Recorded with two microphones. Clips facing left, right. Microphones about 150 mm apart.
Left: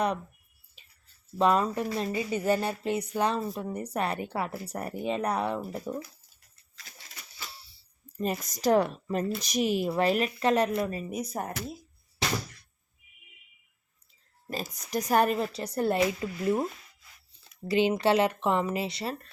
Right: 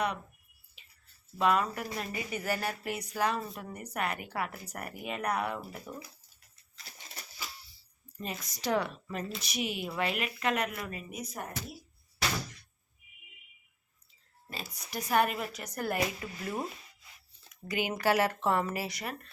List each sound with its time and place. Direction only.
1.4 s a woman's voice: 30° left (ahead or behind)
8.2 s a woman's voice: 45° left (ahead or behind)
14.8 s a woman's voice: 40° left (ahead or behind)